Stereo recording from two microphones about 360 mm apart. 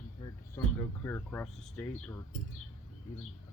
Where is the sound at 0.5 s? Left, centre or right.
Centre.